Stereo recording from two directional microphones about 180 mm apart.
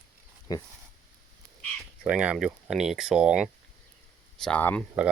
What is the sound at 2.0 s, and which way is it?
Speech, 5° right (ahead or behind).